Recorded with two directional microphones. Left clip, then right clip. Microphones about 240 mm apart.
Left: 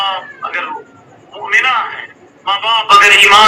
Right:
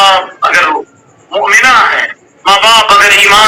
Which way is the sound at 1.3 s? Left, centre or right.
Right.